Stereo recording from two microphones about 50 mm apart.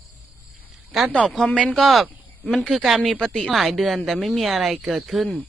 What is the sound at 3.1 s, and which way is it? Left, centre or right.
Speech, centre.